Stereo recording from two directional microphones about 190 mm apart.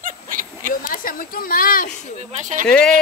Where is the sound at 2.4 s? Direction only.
40° right (ahead or behind).